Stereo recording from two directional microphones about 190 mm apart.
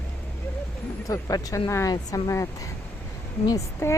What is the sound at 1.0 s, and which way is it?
A woman's voice, 20° left (ahead or behind).